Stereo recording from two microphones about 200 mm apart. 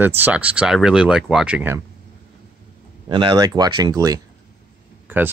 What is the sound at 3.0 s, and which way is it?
Speech, 25° right (ahead or behind).